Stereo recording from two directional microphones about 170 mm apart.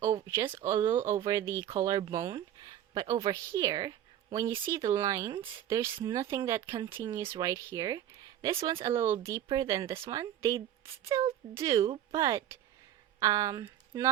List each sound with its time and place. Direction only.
0.0 s speech: 15° right (ahead or behind)